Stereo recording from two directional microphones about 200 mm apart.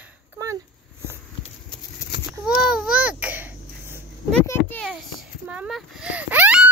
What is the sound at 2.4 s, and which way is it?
Babbling, centre (ahead or behind).